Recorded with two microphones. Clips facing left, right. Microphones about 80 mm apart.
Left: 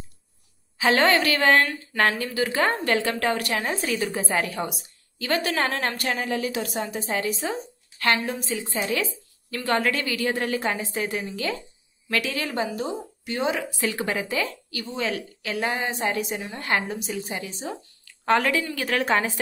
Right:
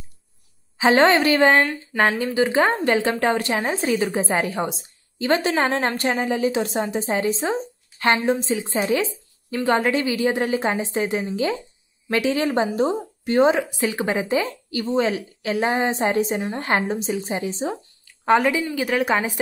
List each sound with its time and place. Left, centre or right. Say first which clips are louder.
0.7 s speech: right 4 dB; right
13.6 s speech: right 4 dB; right